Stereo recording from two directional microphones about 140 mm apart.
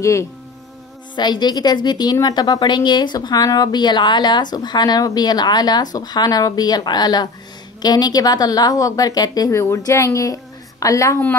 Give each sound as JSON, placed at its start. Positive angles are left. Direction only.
{"t": 0.0, "sound": "speech", "side_deg": 20}
{"t": 1.1, "sound": "speech", "side_deg": 30}